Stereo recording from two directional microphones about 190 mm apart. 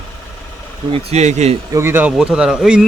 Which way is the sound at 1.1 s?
35° right (ahead or behind).